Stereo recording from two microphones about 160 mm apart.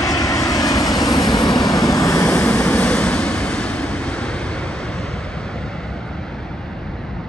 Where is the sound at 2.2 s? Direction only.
5° left (ahead or behind).